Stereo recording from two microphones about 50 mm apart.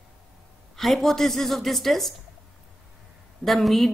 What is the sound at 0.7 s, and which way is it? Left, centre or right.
A woman's voice, centre.